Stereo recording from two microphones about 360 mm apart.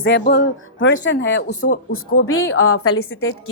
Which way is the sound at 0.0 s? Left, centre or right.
Left.